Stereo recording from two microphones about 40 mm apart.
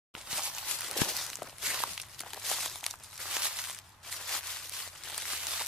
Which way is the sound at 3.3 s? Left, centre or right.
Centre.